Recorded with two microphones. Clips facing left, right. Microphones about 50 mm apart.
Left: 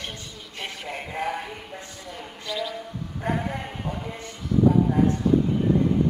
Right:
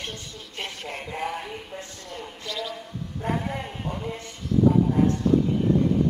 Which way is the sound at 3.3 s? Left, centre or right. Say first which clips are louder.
Left 1 dB; centre.